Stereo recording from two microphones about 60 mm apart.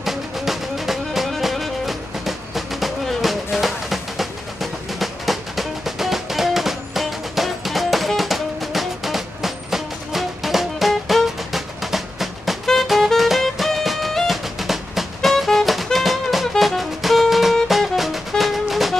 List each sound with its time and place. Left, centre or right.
0.0 s music: centre